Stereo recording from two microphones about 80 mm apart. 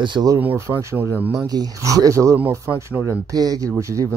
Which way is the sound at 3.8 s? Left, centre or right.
Right.